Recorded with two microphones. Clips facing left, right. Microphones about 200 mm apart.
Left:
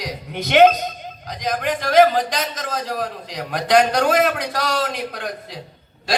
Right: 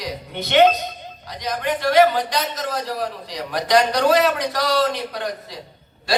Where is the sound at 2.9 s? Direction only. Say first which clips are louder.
Even; 50° left (ahead or behind).